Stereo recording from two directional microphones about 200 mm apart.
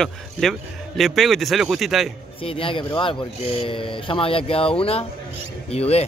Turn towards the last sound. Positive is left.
turn(degrees=30)  # may be behind; listen again after turning